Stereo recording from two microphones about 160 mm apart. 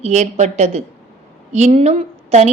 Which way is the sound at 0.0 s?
45° right (ahead or behind).